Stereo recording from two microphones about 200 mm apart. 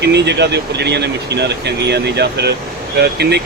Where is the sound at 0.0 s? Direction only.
60° right (ahead or behind).